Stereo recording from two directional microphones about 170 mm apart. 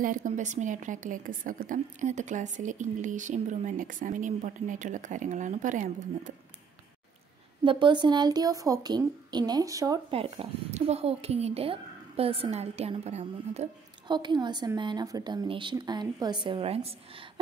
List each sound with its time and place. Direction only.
0.0 s a woman's voice: 50° right (ahead or behind)
7.6 s a woman's voice: 30° right (ahead or behind)
10.1 s speech: 35° right (ahead or behind)
14.0 s a woman's voice: 25° right (ahead or behind)